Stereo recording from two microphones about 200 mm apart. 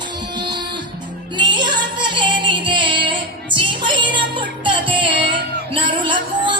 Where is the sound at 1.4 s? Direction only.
25° right (ahead or behind).